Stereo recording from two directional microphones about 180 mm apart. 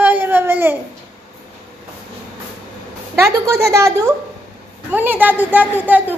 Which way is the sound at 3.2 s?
15° right (ahead or behind).